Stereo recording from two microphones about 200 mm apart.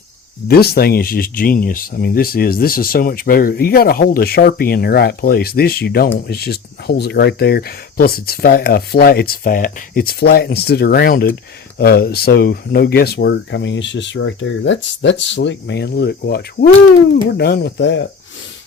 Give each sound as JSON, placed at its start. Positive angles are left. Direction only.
{"t": 0.4, "sound": "speech", "side_deg": 50}